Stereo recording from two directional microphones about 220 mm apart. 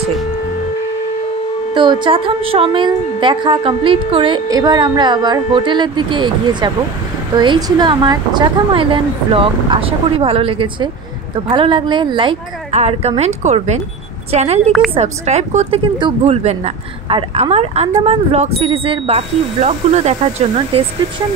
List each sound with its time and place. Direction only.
1.7 s speech: 20° right (ahead or behind)